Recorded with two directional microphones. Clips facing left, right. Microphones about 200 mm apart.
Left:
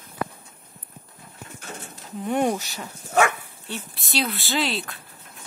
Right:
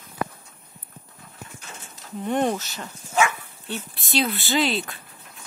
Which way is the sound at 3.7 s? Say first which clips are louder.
Right 3 dB; centre (ahead or behind).